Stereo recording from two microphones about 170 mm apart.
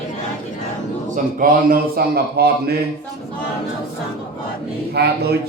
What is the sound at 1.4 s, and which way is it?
Speech, 60° right (ahead or behind).